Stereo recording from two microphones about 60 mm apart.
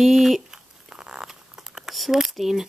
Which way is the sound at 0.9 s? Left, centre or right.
Centre.